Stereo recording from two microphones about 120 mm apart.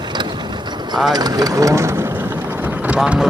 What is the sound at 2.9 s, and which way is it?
Speech, 10° right (ahead or behind).